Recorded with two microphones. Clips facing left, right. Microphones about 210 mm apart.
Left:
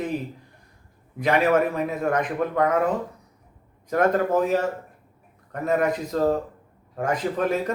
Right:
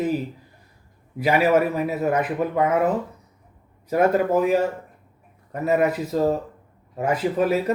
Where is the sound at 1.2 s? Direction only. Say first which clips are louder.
Right 1 dB; 5° right (ahead or behind).